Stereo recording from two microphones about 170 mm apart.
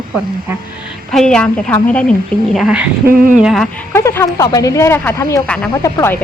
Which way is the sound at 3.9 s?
15° left (ahead or behind).